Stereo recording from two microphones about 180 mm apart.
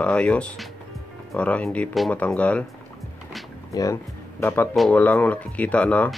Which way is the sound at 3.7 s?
20° left (ahead or behind).